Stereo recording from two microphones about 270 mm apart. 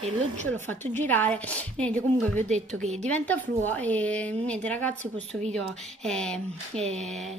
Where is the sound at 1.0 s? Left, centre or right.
Centre.